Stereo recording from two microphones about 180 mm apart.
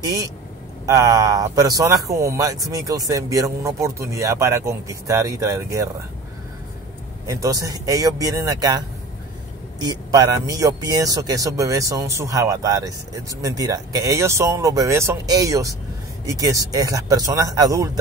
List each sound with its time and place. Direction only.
0.0 s speech: 20° right (ahead or behind)
7.2 s speech: 20° right (ahead or behind)